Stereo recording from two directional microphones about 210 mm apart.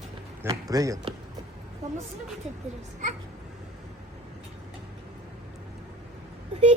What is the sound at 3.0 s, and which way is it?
Speech, 35° right (ahead or behind).